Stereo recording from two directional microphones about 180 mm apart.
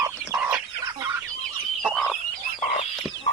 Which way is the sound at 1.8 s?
Centre (ahead or behind).